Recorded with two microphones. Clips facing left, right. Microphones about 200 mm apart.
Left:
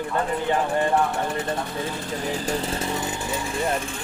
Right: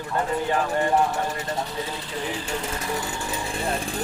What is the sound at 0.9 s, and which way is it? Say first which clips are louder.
Speech: even; 55° left (ahead or behind).